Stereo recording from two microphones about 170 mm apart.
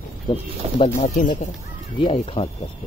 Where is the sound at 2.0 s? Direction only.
35° left (ahead or behind).